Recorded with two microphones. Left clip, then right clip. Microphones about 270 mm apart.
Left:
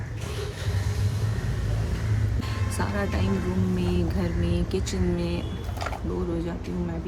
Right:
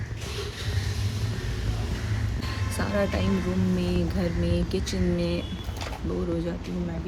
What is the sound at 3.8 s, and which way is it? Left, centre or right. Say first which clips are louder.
Speech: even; centre.